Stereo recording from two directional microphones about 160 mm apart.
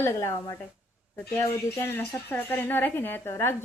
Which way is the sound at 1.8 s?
15° left (ahead or behind).